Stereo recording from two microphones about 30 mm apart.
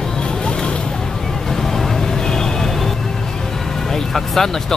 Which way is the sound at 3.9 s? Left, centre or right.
Centre.